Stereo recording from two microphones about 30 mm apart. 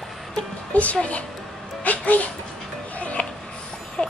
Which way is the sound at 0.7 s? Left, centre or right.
Left.